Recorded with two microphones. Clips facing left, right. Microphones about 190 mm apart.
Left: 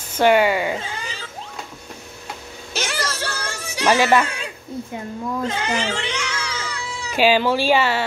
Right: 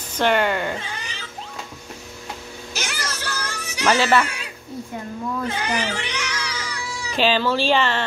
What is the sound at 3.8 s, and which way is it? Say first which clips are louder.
Speech: left 2 dB; 15° left (ahead or behind).